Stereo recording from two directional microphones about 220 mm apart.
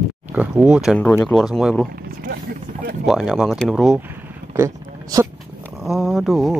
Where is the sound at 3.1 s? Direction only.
Centre (ahead or behind).